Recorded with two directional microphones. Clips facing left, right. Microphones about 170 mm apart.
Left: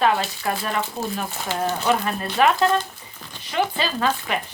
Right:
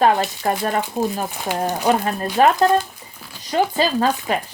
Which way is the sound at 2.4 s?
35° right (ahead or behind).